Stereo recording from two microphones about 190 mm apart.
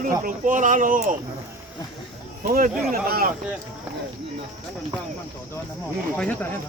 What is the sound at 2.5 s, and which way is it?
Speech, 45° right (ahead or behind).